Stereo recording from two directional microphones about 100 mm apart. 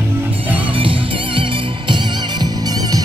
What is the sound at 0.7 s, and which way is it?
Music, 60° right (ahead or behind).